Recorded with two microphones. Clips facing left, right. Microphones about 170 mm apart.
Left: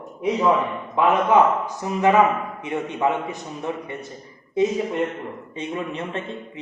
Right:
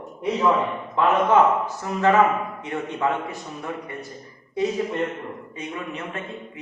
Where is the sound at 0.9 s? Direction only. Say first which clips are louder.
Left 1 dB; 15° left (ahead or behind).